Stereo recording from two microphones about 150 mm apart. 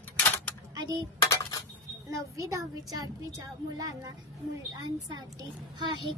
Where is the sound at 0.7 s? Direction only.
25° right (ahead or behind).